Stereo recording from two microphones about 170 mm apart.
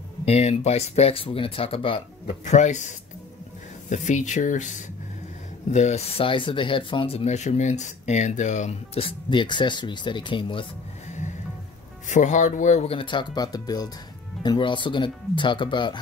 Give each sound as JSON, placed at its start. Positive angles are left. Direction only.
{"t": 0.2, "sound": "speech", "side_deg": 40}
{"t": 12.1, "sound": "speech", "side_deg": 45}